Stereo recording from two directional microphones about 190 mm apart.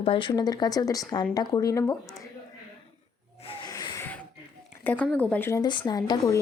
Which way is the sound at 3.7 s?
20° left (ahead or behind).